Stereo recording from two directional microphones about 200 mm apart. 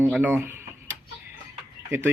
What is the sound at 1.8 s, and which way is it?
Speech, 10° right (ahead or behind).